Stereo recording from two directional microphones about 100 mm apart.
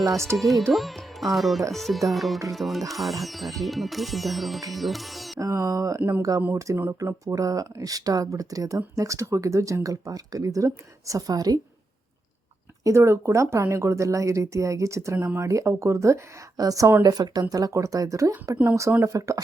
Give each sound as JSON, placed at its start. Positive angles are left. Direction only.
{"t": 0.3, "sound": "music", "side_deg": 0}
{"t": 0.7, "sound": "speech", "side_deg": 0}
{"t": 1.7, "sound": "music", "side_deg": 0}
{"t": 5.4, "sound": "speech", "side_deg": -35}
{"t": 6.0, "sound": "speech", "side_deg": -20}
{"t": 12.8, "sound": "speech", "side_deg": -25}